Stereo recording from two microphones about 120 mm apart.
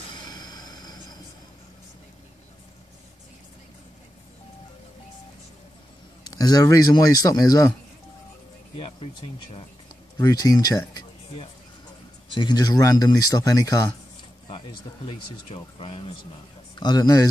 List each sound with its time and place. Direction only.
0.1 s vehicle: 35° left (ahead or behind)
6.2 s speech: 35° left (ahead or behind)
8.7 s speech: 50° left (ahead or behind)
10.2 s speech: 30° left (ahead or behind)
12.4 s speech: 35° left (ahead or behind)
15.0 s speech: 50° left (ahead or behind)
16.7 s speech: 35° left (ahead or behind)